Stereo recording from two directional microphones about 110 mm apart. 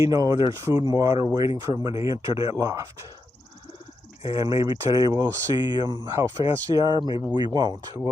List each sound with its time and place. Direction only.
0.0 s speech: 35° right (ahead or behind)
4.2 s speech: 30° right (ahead or behind)
6.1 s speech: 25° right (ahead or behind)